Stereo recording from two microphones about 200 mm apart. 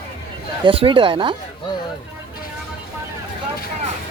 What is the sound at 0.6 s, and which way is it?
Speech, 25° right (ahead or behind).